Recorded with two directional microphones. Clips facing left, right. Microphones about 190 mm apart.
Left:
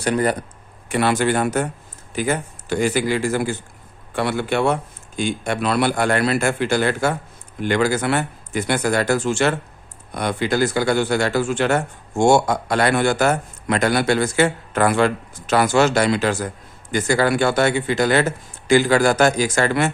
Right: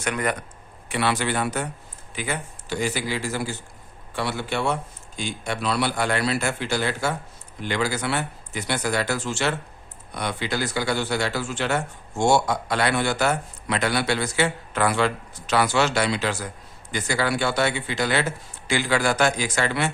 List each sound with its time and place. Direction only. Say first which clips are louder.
0.0 s speech: left 6 dB; 35° left (ahead or behind)
0.9 s speech: left 6 dB; 45° left (ahead or behind)